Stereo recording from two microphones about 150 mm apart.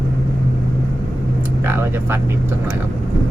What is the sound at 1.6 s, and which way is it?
Speech, 15° right (ahead or behind).